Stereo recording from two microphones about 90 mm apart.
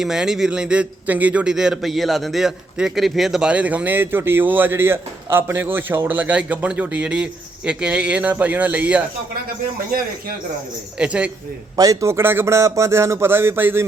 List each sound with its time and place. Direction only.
0.0 s a man's voice: 5° right (ahead or behind)
3.5 s a man's voice: 15° right (ahead or behind)
10.9 s a man's voice: 10° right (ahead or behind)
11.8 s a man's voice: 40° right (ahead or behind)